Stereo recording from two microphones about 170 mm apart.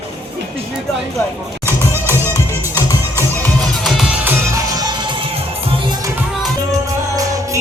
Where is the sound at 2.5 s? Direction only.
15° left (ahead or behind).